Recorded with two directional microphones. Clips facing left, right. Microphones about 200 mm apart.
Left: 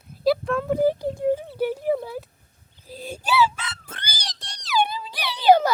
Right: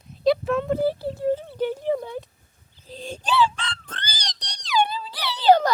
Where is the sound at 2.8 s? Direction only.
10° left (ahead or behind).